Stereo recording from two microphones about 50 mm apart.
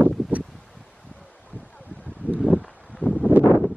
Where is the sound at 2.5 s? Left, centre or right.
Centre.